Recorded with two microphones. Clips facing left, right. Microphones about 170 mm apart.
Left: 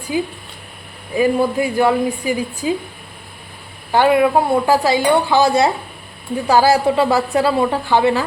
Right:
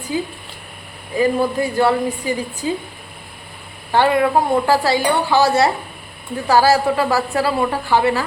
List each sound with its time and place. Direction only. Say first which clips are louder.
0.1 s speech: left 2 dB; 15° left (ahead or behind)
3.9 s speech: left 2 dB; 15° left (ahead or behind)